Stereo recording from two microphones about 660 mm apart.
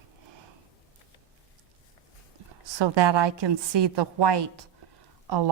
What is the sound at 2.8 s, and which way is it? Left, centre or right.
A woman's voice, right.